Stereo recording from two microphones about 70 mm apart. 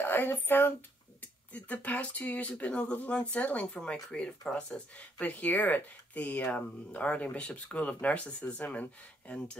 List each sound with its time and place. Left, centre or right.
0.0 s speech: left